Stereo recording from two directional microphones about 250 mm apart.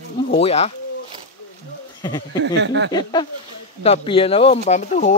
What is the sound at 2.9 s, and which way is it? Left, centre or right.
Speech, centre.